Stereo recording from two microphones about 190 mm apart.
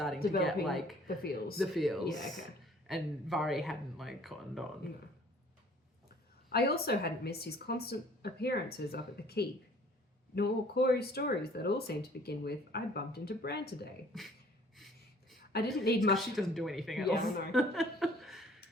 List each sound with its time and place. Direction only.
0.4 s a woman's voice: centre (ahead or behind)
1.0 s speech: 55° left (ahead or behind)
1.5 s a woman's voice: centre (ahead or behind)
6.5 s speech: 55° left (ahead or behind)
14.1 s a woman's voice: centre (ahead or behind)
15.8 s speech: 60° left (ahead or behind)
16.1 s a woman's voice: centre (ahead or behind)